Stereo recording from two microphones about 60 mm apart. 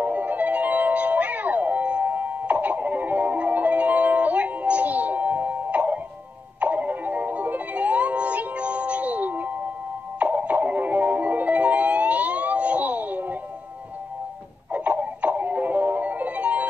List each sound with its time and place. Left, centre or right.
0.0 s music: right
14.7 s music: right